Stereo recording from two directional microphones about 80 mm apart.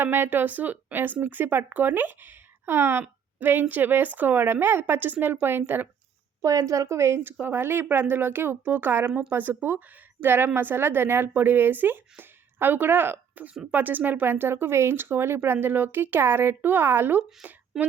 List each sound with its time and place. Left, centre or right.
0.0 s speech: right
6.4 s a woman's voice: right
17.7 s speech: centre